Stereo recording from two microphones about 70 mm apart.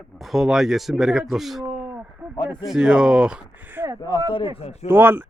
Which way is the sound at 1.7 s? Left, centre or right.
Right.